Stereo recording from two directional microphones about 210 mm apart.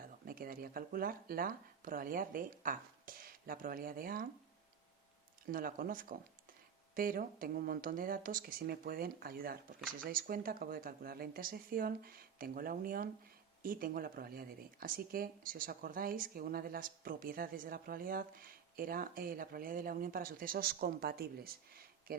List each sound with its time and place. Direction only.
0.0 s speech: 45° right (ahead or behind)
5.5 s speech: 40° right (ahead or behind)